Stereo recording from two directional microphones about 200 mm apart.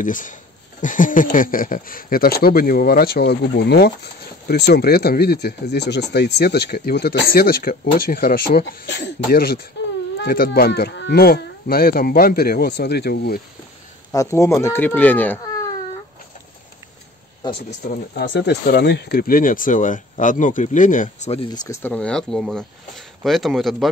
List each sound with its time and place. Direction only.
0.0 s speech: 40° left (ahead or behind)
14.1 s speech: 15° left (ahead or behind)
17.4 s speech: 20° left (ahead or behind)
18.1 s speech: 60° left (ahead or behind); by 21.5 s 35° left (ahead or behind)
21.5 s speech: 10° left (ahead or behind)